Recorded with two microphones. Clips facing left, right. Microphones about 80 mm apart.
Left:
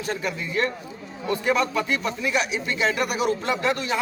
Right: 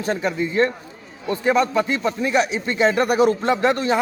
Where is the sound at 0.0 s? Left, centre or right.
Right.